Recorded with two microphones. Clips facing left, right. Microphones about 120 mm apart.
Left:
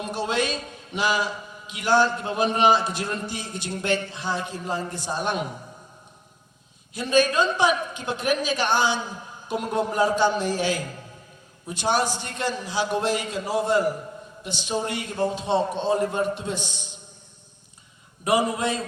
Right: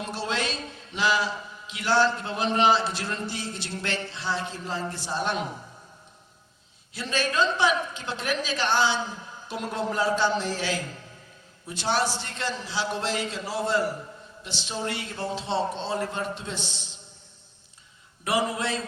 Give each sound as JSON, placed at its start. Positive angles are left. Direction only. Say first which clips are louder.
{"t": 0.0, "sound": "a sound", "louder": "left 4 dB", "side_deg": 15}
{"t": 2.1, "sound": "a woman's voice", "louder": "left 2 dB", "side_deg": 15}
{"t": 6.9, "sound": "a woman's voice", "louder": "left 7 dB", "side_deg": 15}
{"t": 18.3, "sound": "a woman's voice", "louder": "left 4 dB", "side_deg": 15}